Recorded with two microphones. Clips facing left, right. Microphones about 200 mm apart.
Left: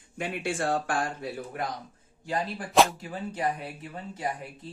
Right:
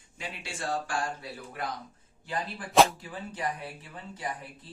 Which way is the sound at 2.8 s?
Centre (ahead or behind).